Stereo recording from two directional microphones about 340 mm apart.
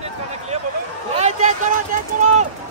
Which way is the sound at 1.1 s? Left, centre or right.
Centre.